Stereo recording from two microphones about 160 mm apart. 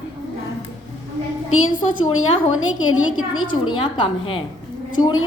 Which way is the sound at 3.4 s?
30° left (ahead or behind).